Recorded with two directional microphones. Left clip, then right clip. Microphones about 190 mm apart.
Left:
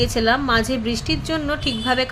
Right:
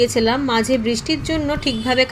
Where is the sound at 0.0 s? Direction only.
5° right (ahead or behind).